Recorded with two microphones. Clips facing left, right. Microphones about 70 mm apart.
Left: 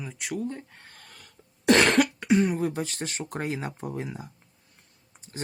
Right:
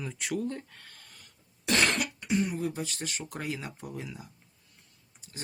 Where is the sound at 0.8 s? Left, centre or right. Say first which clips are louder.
Left 2 dB; left.